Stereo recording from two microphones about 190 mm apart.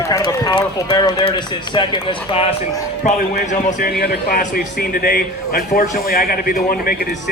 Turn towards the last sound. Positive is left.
turn(degrees=50)  # may be behind; listen again after turning